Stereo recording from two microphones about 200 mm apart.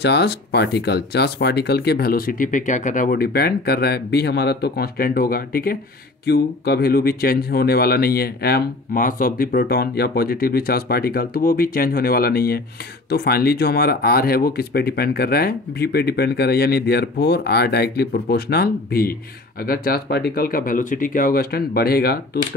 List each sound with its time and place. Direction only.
0.0 s speech: 55° left (ahead or behind)